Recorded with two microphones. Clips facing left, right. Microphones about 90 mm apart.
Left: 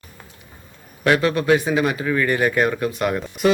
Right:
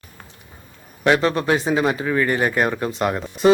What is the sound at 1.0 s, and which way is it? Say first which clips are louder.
A man's voice: even; 25° right (ahead or behind).